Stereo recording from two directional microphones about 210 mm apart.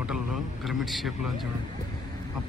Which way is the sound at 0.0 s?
5° right (ahead or behind).